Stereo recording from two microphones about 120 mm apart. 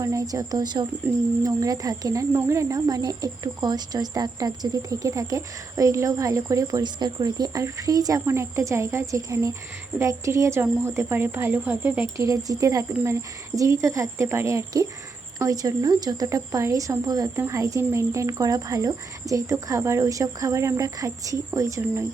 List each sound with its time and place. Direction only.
0.0 s speech: 25° right (ahead or behind)
12.1 s speech: 30° right (ahead or behind)